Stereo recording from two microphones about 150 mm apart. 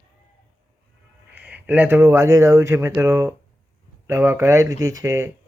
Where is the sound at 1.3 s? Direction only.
10° right (ahead or behind).